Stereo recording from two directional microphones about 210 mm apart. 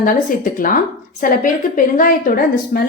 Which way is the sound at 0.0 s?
40° left (ahead or behind).